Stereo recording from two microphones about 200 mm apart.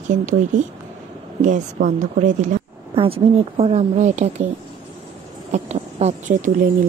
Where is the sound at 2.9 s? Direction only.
25° right (ahead or behind).